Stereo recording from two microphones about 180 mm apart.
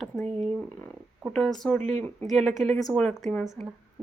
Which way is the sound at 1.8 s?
40° right (ahead or behind).